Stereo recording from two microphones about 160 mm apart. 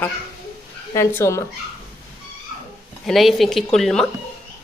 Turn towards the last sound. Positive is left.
turn(degrees=5)  # may be behind; listen again after turning